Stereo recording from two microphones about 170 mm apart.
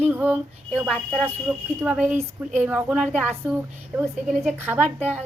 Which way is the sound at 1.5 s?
15° right (ahead or behind).